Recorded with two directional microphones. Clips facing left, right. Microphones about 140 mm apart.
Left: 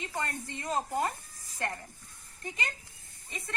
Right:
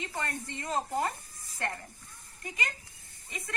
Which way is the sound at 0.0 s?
20° left (ahead or behind).